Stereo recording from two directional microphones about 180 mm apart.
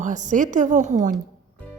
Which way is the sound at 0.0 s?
45° right (ahead or behind).